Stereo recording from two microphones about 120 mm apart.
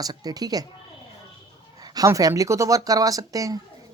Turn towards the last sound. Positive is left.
turn(degrees=-30)  # may be behind; listen again after turning